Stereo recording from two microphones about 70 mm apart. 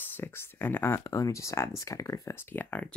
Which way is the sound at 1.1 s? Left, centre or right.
Left.